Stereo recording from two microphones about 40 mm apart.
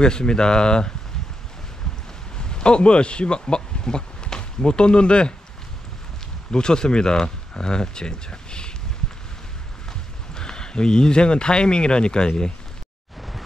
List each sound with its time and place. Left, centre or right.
0.0 s speech: left
2.3 s speech: left
6.5 s speech: centre
10.3 s speech: centre